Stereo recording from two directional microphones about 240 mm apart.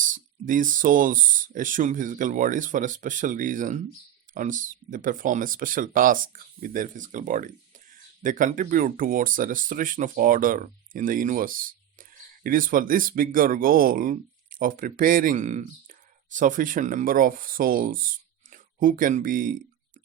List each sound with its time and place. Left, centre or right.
0.0 s speech: right